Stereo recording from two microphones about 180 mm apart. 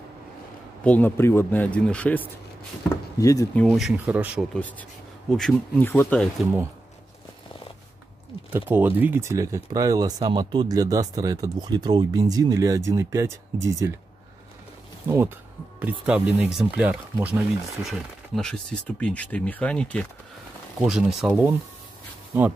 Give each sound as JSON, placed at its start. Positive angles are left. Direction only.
{"t": 0.8, "sound": "speech", "side_deg": 10}
{"t": 2.9, "sound": "speech", "side_deg": 20}
{"t": 3.5, "sound": "speech", "side_deg": 0}
{"t": 4.6, "sound": "speech", "side_deg": 10}
{"t": 8.5, "sound": "speech", "side_deg": -10}
{"t": 15.0, "sound": "speech", "side_deg": -10}
{"t": 21.3, "sound": "speech", "side_deg": -15}